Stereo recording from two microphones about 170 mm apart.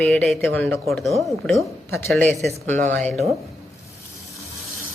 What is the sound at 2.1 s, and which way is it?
Speech, centre (ahead or behind).